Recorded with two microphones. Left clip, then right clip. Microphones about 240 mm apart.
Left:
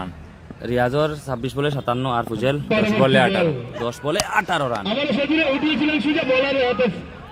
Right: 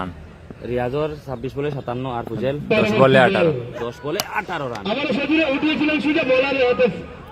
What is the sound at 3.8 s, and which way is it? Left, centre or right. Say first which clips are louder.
A man's voice: left 4 dB; left.